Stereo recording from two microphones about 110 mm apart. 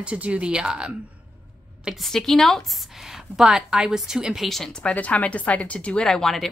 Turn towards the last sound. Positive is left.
turn(degrees=5)  # may be behind; listen again after turning